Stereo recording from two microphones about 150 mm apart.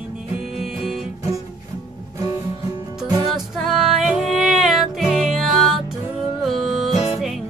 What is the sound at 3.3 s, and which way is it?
Music, centre (ahead or behind).